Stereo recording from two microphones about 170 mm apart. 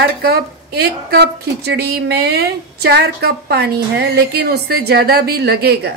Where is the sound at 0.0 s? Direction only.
70° right (ahead or behind).